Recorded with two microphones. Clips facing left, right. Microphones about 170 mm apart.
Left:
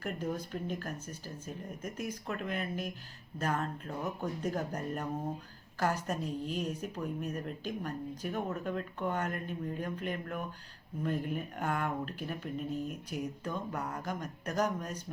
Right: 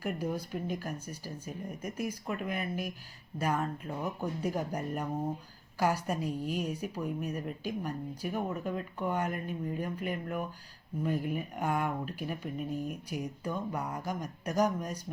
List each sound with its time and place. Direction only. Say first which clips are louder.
0.0 s a woman's voice: right 2 dB; 10° right (ahead or behind)